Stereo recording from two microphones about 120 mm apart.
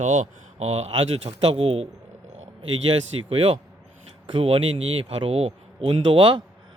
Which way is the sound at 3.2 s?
55° right (ahead or behind).